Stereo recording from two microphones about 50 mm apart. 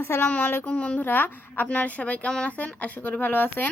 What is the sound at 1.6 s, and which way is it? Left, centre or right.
Speech, left.